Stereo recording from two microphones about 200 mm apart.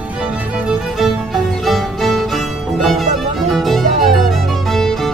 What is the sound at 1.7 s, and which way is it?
Music, centre (ahead or behind).